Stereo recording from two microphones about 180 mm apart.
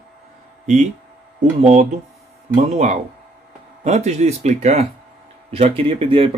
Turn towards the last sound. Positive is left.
turn(degrees=-30)  # may be behind; listen again after turning